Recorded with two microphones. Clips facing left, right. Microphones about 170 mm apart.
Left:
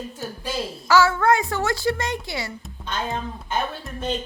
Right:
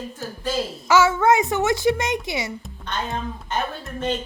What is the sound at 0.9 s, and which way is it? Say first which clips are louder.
A woman's voice: right 1 dB; 20° right (ahead or behind).